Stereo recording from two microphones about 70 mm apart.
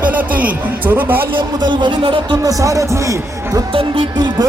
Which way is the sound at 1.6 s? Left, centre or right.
Right.